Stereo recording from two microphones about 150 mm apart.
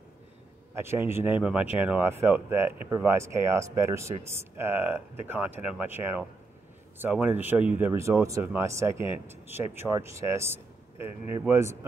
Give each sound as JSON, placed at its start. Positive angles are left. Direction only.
{"t": 0.7, "sound": "speech", "side_deg": -15}